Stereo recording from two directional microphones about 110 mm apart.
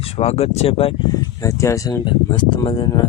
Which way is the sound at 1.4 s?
30° left (ahead or behind).